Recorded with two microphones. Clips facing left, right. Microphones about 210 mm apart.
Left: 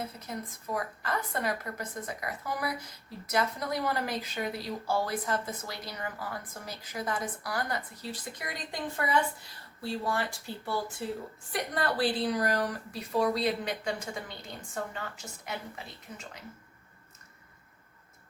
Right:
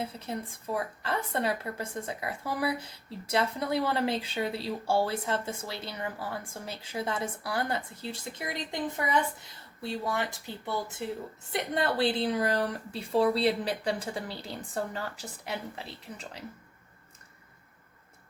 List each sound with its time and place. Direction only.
0.0 s a woman's voice: 30° right (ahead or behind)